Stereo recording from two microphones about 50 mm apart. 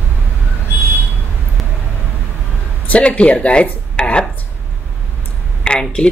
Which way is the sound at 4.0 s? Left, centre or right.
Centre.